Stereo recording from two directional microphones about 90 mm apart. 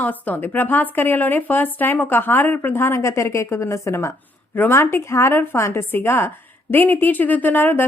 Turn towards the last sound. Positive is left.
turn(degrees=25)  # may be behind; listen again after turning